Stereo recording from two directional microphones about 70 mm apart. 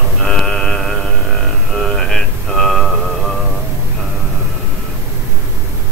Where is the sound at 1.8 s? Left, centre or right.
Centre.